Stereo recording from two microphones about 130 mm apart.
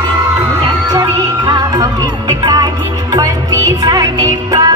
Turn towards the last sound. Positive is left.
turn(degrees=-30)  # may be behind; listen again after turning